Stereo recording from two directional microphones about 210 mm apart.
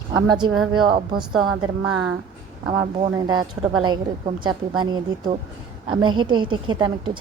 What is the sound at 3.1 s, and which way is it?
A woman's voice, 20° right (ahead or behind).